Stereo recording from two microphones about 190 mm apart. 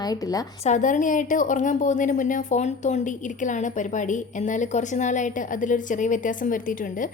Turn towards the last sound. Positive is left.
turn(degrees=45)  # may be behind; listen again after turning